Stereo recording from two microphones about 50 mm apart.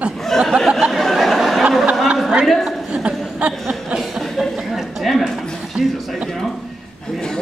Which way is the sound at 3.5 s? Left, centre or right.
Centre.